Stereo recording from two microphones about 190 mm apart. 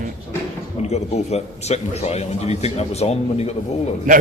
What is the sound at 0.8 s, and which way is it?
A man's voice, 35° left (ahead or behind).